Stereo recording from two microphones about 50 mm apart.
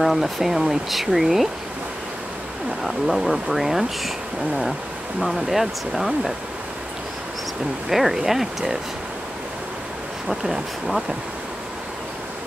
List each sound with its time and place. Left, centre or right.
0.0 s speech: centre
2.8 s speech: centre
5.2 s speech: centre
7.9 s speech: centre
10.2 s speech: centre